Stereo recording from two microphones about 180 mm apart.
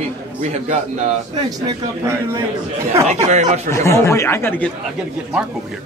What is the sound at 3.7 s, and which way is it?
Speech, 15° left (ahead or behind).